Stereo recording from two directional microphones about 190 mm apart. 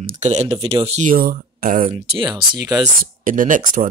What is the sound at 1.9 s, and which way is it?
Speech, 30° right (ahead or behind).